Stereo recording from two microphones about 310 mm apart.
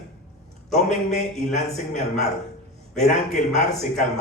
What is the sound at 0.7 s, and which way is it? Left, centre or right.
A man's voice, left.